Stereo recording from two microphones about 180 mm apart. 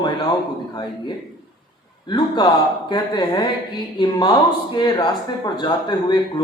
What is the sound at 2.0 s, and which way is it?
Speech, 25° left (ahead or behind).